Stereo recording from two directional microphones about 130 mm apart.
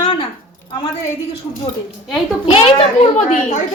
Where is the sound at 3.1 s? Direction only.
65° left (ahead or behind).